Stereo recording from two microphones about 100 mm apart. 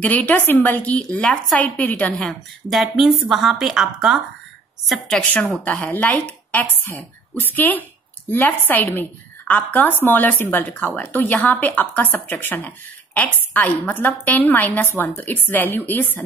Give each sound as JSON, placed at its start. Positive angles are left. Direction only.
{"t": 0.0, "sound": "a woman's voice", "side_deg": 15}
{"t": 5.6, "sound": "speech", "side_deg": 15}